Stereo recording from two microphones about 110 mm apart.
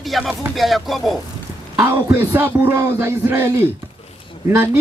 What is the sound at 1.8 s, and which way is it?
Speech, 25° right (ahead or behind).